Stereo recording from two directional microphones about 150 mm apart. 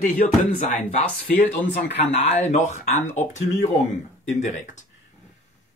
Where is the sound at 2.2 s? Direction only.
50° left (ahead or behind).